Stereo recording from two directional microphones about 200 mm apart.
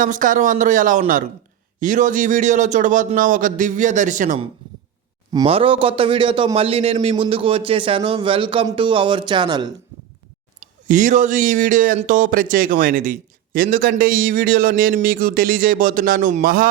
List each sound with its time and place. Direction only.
0.0 s a man's voice: 40° right (ahead or behind)
5.3 s a man's voice: 25° right (ahead or behind)
10.8 s a man's voice: 40° right (ahead or behind)